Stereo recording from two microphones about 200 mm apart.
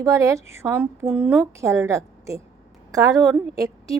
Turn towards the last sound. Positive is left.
turn(degrees=-15)  # may be behind; listen again after turning